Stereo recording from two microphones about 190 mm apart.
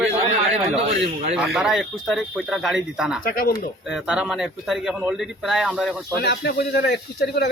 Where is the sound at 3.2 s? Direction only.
50° left (ahead or behind).